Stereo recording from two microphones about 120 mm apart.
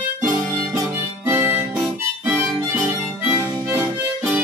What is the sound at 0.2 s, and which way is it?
Harmonica, 25° right (ahead or behind).